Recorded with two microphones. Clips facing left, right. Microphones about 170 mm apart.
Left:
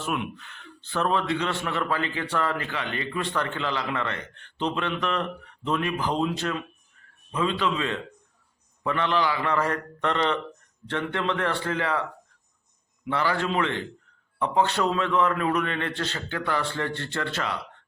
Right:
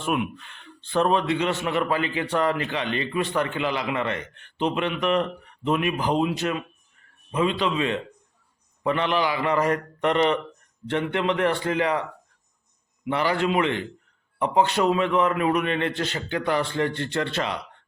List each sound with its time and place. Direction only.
0.6 s speech: 20° right (ahead or behind)
13.1 s speech: 15° right (ahead or behind)